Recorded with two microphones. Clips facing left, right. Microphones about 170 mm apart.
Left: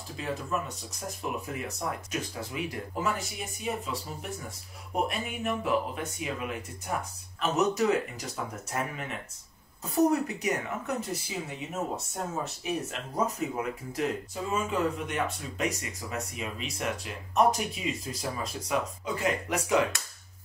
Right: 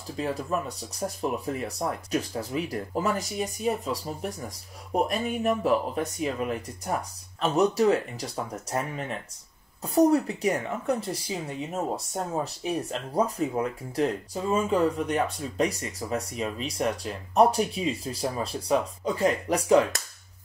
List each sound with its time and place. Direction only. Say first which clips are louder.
0.2 s speech: right 4 dB; 35° right (ahead or behind)
9.8 s speech: right 4 dB; 30° right (ahead or behind)